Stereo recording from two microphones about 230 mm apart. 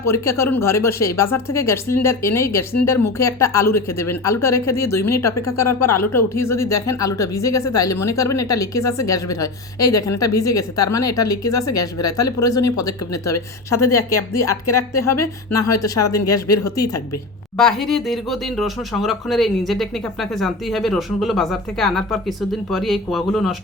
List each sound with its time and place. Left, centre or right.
0.0 s speech: centre
5.3 s speech: left
6.3 s speech: centre
14.9 s speech: left
16.1 s speech: centre
17.6 s speech: centre